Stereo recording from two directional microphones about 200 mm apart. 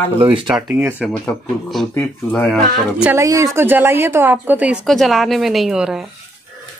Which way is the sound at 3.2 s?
15° right (ahead or behind).